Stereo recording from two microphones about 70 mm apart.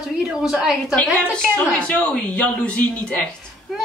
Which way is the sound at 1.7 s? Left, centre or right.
Centre.